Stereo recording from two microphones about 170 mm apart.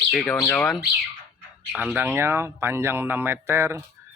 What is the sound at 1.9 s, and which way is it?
Speech, 10° right (ahead or behind).